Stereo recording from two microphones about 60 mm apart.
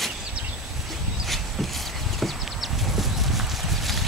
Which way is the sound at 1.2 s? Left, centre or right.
Centre.